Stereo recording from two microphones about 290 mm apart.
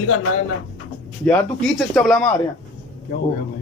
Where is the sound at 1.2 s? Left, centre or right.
Centre.